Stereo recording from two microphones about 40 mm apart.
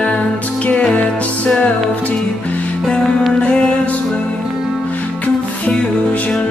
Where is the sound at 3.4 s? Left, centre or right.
Left.